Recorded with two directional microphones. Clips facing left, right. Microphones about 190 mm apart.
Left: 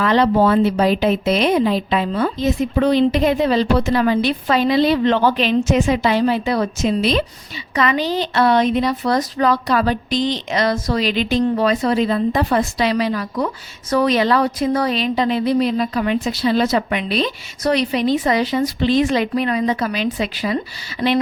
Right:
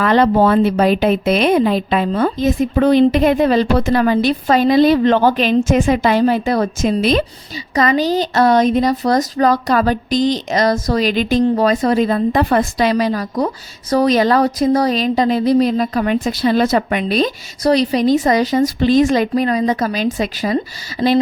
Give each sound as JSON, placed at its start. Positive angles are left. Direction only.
{"t": 0.0, "sound": "speech", "side_deg": -50}